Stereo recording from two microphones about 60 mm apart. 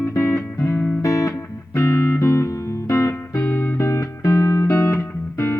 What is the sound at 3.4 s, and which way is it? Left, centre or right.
Music, left.